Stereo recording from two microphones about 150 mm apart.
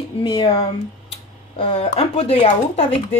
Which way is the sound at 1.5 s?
35° left (ahead or behind).